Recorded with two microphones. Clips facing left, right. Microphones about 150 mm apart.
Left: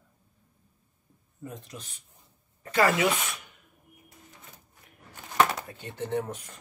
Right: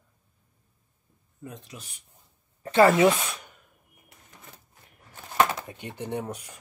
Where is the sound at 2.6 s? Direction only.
25° right (ahead or behind).